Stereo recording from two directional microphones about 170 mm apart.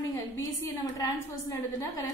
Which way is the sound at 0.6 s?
20° left (ahead or behind).